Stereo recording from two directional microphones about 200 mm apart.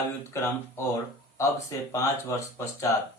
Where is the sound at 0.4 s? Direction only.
15° left (ahead or behind).